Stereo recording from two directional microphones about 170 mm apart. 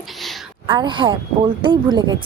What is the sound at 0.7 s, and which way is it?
Speech, 30° right (ahead or behind).